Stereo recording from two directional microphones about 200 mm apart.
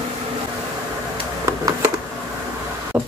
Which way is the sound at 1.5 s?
15° right (ahead or behind).